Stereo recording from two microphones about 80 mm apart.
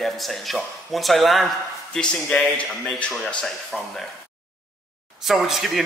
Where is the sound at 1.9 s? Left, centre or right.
Centre.